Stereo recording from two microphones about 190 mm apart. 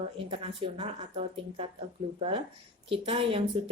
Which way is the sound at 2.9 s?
30° right (ahead or behind).